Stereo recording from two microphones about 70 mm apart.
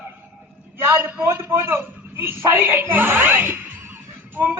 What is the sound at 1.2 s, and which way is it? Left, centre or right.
A man's voice, right.